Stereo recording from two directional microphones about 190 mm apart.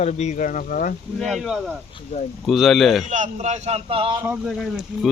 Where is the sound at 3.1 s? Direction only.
40° right (ahead or behind).